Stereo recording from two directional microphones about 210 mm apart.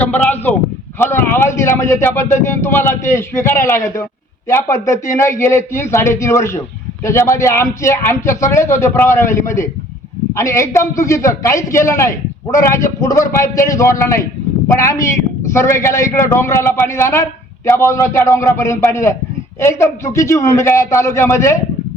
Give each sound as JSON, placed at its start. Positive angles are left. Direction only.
{"t": 0.0, "sound": "speech", "side_deg": 10}